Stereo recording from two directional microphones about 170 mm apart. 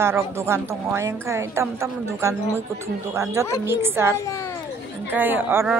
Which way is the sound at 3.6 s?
15° right (ahead or behind).